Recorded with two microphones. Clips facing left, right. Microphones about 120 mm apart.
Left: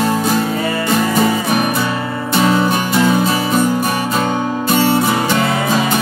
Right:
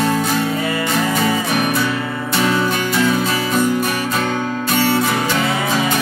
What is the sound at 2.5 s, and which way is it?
Music, 15° left (ahead or behind).